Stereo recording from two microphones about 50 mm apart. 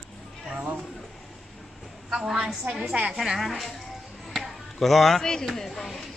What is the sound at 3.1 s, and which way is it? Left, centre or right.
Speech, centre.